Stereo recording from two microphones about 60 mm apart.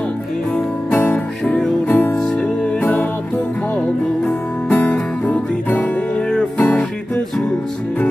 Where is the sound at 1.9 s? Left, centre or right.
Left.